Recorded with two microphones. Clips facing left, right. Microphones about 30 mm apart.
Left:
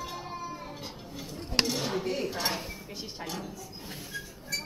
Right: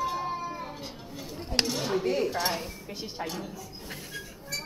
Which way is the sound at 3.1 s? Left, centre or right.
Centre.